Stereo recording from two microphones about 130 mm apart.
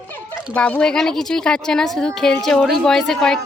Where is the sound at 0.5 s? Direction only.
10° left (ahead or behind).